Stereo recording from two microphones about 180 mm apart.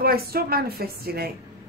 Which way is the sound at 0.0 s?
55° right (ahead or behind).